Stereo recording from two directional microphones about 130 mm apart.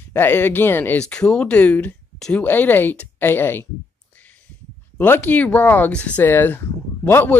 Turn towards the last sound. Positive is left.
turn(degrees=15)  # may be behind; listen again after turning